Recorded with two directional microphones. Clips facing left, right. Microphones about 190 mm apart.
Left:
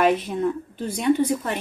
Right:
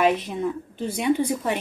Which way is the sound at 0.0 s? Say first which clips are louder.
Left 2 dB; centre (ahead or behind).